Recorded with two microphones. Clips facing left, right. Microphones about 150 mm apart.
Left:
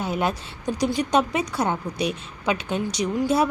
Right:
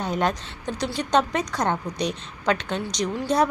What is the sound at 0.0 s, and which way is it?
A woman's voice, 5° left (ahead or behind).